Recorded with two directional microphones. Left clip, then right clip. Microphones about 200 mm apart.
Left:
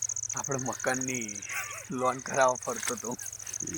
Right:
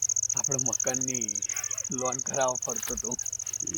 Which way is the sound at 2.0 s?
20° left (ahead or behind).